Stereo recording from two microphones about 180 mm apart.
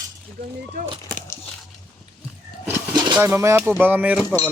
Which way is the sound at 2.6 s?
25° right (ahead or behind).